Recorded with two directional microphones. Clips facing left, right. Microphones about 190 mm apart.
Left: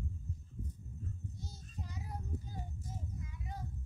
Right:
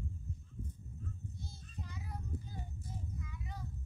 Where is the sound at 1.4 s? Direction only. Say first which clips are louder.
Left 1 dB; 40° left (ahead or behind).